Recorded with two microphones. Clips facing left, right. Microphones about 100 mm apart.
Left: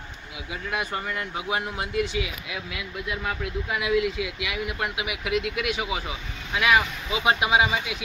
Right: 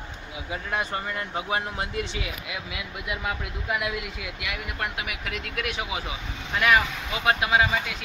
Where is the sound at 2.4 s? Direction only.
5° right (ahead or behind).